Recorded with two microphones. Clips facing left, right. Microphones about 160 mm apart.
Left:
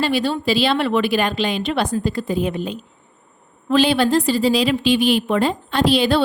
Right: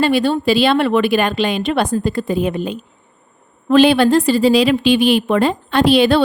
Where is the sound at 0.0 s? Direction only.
55° right (ahead or behind).